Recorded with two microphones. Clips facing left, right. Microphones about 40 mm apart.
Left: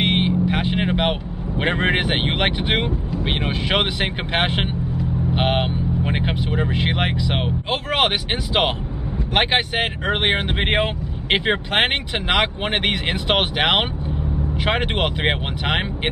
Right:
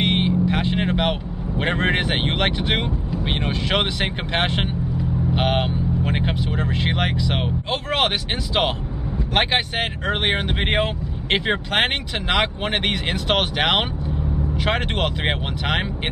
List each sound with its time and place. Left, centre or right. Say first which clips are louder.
0.0 s vehicle: left 1 dB; centre
1.6 s speech: left 1 dB; centre
9.3 s speech: left 2 dB; centre